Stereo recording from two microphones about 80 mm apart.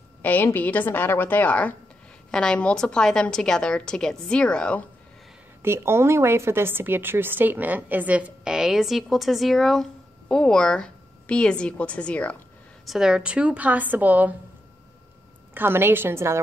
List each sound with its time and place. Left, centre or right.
0.2 s a woman's voice: left
5.6 s a woman's voice: right
8.5 s a woman's voice: centre
12.8 s a woman's voice: centre; by 14.3 s right
15.5 s a woman's voice: right